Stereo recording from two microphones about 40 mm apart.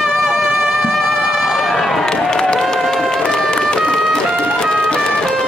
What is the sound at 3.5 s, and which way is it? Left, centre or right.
Run, left.